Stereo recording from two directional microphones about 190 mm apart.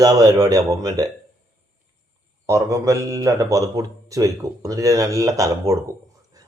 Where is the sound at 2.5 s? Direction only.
15° right (ahead or behind).